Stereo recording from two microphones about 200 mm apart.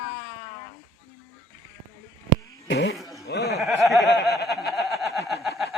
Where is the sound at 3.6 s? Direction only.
Centre (ahead or behind).